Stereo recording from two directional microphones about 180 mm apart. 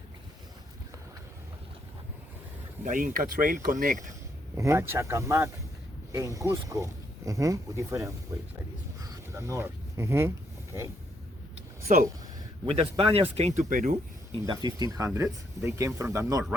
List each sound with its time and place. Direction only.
2.8 s speech: 50° right (ahead or behind)
4.5 s speech: 15° right (ahead or behind)
9.0 s a sound: 15° right (ahead or behind)
12.6 s speech: 30° right (ahead or behind)
14.3 s speech: 25° right (ahead or behind)